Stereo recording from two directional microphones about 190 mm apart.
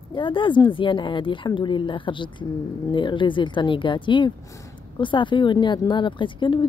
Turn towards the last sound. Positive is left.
turn(degrees=25)  # may be behind; listen again after turning